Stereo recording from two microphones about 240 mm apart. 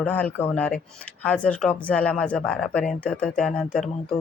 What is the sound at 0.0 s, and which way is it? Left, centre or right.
Speech, centre.